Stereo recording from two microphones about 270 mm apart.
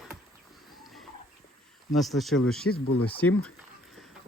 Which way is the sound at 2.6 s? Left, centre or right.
Left.